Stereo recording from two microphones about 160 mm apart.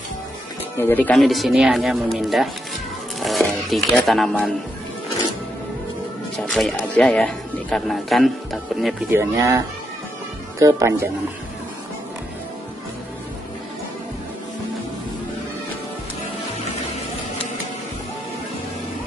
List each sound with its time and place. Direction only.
0.7 s speech: 15° left (ahead or behind)
3.2 s a sound: centre (ahead or behind)
6.3 s speech: centre (ahead or behind)
9.1 s speech: 20° right (ahead or behind)
10.6 s speech: 20° right (ahead or behind)